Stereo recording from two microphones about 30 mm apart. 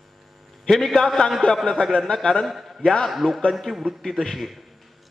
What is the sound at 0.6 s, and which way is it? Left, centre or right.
Speech, centre.